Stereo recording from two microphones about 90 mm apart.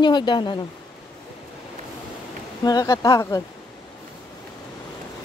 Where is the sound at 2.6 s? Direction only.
45° left (ahead or behind).